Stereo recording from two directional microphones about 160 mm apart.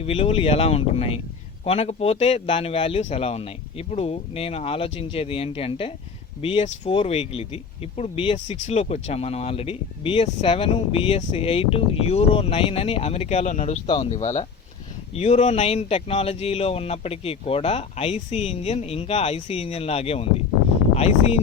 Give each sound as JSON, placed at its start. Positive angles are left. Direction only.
{"t": 0.0, "sound": "speech", "side_deg": 40}
{"t": 13.8, "sound": "speech", "side_deg": 30}
{"t": 14.1, "sound": "speech", "side_deg": 45}